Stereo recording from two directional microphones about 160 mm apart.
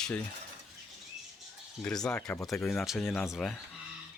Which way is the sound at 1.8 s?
5° left (ahead or behind).